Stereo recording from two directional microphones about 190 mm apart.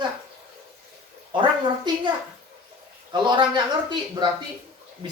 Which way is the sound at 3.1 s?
25° right (ahead or behind).